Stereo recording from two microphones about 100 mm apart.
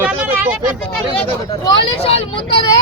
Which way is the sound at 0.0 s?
20° right (ahead or behind).